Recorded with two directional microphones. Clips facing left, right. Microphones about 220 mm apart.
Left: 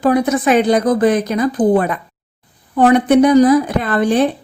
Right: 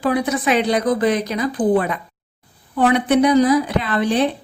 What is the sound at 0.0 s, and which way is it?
Speech, 45° left (ahead or behind).